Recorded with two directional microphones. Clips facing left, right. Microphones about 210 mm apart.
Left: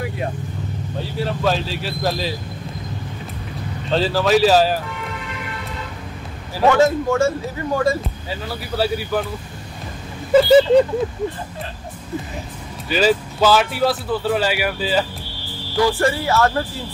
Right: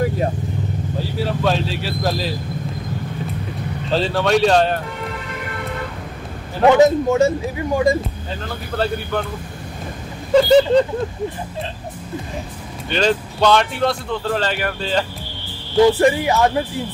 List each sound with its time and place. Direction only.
0.9 s speech: centre (ahead or behind)
3.9 s speech: centre (ahead or behind)
6.6 s speech: 20° right (ahead or behind)
8.3 s speech: 5° left (ahead or behind)
10.3 s speech: 5° left (ahead or behind)
12.9 s speech: 5° left (ahead or behind)
15.7 s speech: 20° right (ahead or behind)